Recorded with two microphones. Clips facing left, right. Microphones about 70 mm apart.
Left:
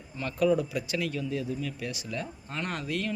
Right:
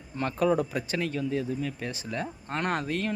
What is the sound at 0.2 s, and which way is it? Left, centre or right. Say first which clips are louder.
Speech: right 1 dB; right.